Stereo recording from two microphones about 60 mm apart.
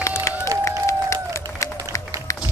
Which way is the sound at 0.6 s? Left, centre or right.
Left.